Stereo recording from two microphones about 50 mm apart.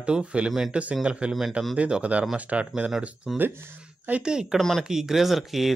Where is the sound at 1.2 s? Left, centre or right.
Right.